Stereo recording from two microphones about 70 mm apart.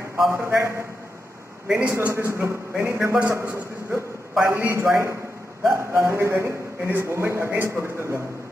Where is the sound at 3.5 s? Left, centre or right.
Right.